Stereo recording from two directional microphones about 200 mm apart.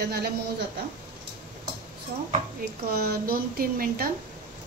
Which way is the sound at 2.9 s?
50° right (ahead or behind).